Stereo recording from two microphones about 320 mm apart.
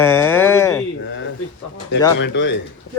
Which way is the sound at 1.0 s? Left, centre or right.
Left.